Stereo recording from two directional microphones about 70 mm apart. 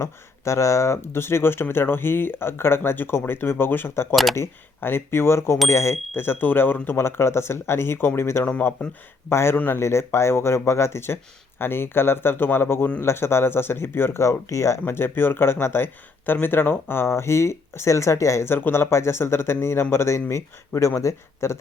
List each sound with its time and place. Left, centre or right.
0.0 s speech: left
4.1 s speech: centre
4.4 s speech: left
9.8 s speech: left
14.8 s speech: left
18.4 s speech: left